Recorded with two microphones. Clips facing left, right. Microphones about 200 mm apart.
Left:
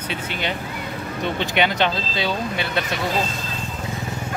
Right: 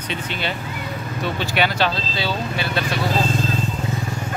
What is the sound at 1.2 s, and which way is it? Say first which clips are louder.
Speech: left 1 dB; 20° left (ahead or behind).